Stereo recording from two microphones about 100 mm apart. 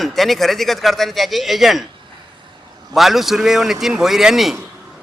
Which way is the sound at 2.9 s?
Centre (ahead or behind).